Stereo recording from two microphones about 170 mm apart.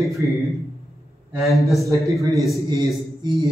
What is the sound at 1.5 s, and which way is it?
Speech, centre (ahead or behind).